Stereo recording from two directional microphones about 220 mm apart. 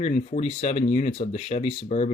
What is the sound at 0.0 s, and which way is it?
Speech, 35° left (ahead or behind).